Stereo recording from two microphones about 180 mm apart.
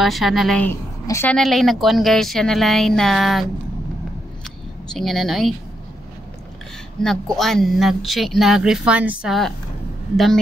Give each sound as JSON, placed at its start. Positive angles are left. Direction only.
{"t": 0.0, "sound": "speech", "side_deg": 0}
{"t": 1.0, "sound": "a woman's voice", "side_deg": 15}
{"t": 1.3, "sound": "speech", "side_deg": 0}
{"t": 4.9, "sound": "speech", "side_deg": 0}
{"t": 7.0, "sound": "speech", "side_deg": 0}